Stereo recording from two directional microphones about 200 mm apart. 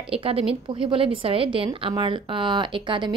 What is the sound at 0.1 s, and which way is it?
Speech, 30° right (ahead or behind).